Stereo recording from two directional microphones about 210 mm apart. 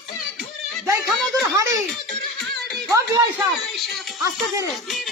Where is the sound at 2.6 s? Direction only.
Centre (ahead or behind).